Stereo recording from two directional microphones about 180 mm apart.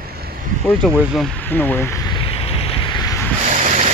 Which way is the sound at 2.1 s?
30° left (ahead or behind).